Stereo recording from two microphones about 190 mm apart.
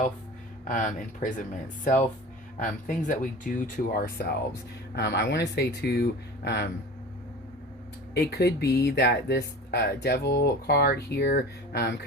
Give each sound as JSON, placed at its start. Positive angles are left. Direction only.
{"t": 0.7, "sound": "speech", "side_deg": 45}
{"t": 4.9, "sound": "speech", "side_deg": 65}
{"t": 8.1, "sound": "speech", "side_deg": 60}